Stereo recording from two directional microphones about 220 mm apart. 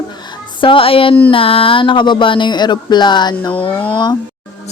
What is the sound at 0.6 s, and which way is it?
A woman's voice, 25° left (ahead or behind).